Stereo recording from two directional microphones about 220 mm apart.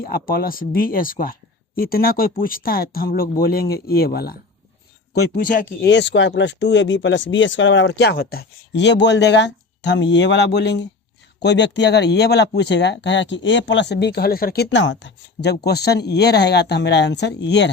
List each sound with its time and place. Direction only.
0.0 s speech: 40° left (ahead or behind)
5.8 s speech: 55° left (ahead or behind)